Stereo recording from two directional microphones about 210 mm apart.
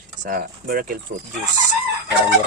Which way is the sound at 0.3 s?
45° right (ahead or behind).